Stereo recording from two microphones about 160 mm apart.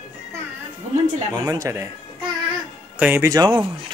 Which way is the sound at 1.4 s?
20° right (ahead or behind).